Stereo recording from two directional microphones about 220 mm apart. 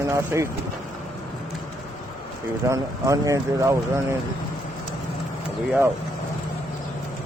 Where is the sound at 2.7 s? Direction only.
15° right (ahead or behind).